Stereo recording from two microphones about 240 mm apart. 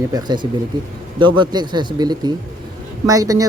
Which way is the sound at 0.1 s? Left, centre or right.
Centre.